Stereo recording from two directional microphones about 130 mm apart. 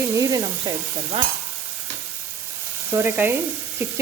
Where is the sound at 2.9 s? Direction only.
15° right (ahead or behind).